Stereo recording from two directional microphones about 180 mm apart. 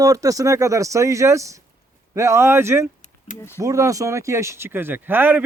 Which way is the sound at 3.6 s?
15° right (ahead or behind).